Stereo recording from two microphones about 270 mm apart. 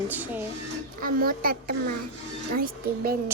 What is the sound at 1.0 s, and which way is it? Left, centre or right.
A child's voice, right.